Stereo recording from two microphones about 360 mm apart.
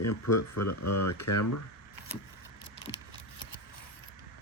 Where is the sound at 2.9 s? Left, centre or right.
Centre.